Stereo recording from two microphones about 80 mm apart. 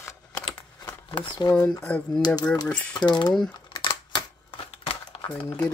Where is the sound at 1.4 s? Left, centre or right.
Left.